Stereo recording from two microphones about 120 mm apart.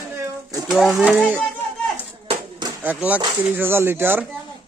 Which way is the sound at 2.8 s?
10° right (ahead or behind).